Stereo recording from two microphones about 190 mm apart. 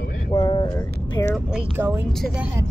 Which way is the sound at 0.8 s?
10° left (ahead or behind).